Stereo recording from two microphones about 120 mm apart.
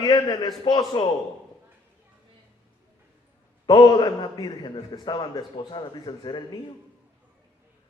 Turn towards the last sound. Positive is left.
turn(degrees=40)  # may be behind; listen again after turning